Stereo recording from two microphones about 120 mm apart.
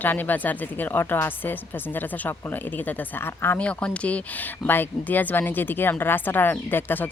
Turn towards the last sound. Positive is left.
turn(degrees=15)  # may be behind; listen again after turning